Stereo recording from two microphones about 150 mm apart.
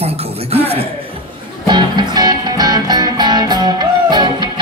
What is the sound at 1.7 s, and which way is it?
Music, 30° right (ahead or behind).